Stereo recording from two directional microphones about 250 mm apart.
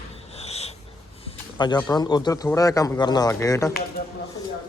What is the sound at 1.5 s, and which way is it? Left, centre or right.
A man's voice, centre.